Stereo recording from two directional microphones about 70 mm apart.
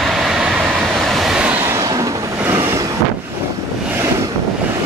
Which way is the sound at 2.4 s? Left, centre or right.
Right.